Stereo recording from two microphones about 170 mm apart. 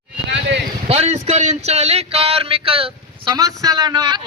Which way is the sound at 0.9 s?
40° right (ahead or behind).